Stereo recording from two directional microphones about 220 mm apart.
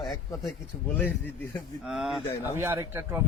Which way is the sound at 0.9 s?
5° left (ahead or behind).